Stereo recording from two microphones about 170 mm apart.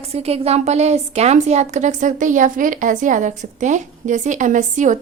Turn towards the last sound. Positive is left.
turn(degrees=-45)  # may be behind; listen again after turning